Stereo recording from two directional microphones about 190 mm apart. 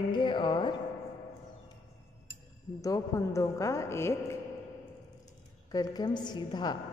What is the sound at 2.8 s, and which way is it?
A woman's voice, 15° left (ahead or behind).